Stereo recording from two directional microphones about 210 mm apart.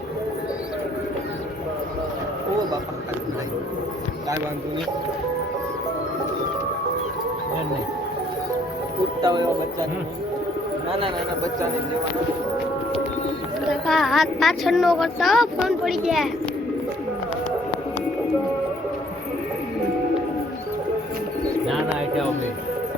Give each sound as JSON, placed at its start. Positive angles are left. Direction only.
{"t": 9.2, "sound": "speech", "side_deg": -20}
{"t": 13.8, "sound": "speech", "side_deg": 0}